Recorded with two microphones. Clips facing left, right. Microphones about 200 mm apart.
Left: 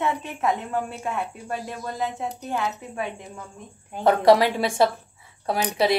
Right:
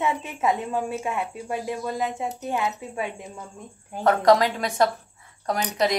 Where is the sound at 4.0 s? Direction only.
10° left (ahead or behind).